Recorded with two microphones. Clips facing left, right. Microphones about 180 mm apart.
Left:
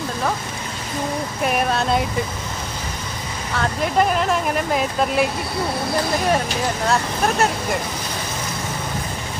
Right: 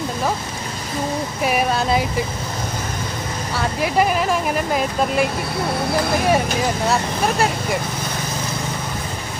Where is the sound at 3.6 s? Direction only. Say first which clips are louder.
Even; 5° right (ahead or behind).